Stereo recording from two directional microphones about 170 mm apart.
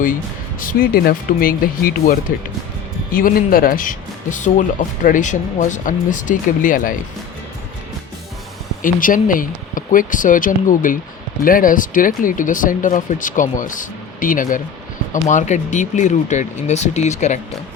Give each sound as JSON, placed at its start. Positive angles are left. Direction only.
{"t": 0.6, "sound": "speech", "side_deg": 55}
{"t": 8.8, "sound": "speech", "side_deg": 50}